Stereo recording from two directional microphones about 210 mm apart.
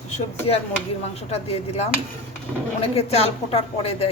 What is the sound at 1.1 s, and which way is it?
A woman's voice, 30° left (ahead or behind).